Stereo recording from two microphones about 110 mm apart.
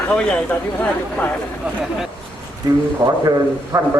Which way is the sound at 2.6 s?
35° right (ahead or behind).